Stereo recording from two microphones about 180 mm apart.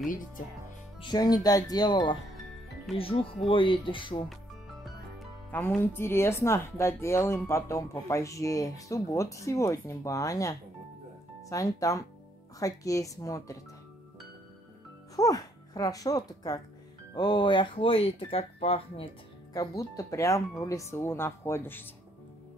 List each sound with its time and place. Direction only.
1.0 s speech: 20° left (ahead or behind)
5.5 s speech: 10° left (ahead or behind)
15.1 s speech: 20° left (ahead or behind)
19.5 s speech: 20° left (ahead or behind)